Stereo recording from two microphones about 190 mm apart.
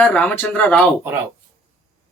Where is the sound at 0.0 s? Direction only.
5° left (ahead or behind).